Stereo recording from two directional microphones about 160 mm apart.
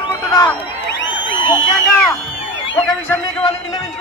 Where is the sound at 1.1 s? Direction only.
30° left (ahead or behind).